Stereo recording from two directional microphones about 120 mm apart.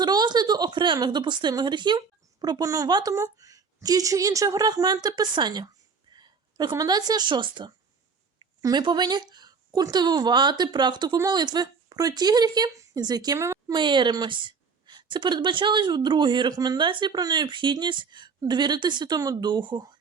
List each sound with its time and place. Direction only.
0.0 s a woman's voice: 35° right (ahead or behind)
13.7 s a woman's voice: 40° right (ahead or behind)